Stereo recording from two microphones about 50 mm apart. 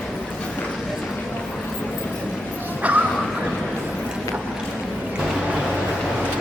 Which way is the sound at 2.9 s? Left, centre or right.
Right.